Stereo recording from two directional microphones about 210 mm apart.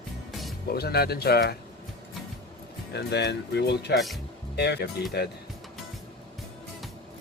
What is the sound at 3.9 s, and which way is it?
Speech, centre (ahead or behind).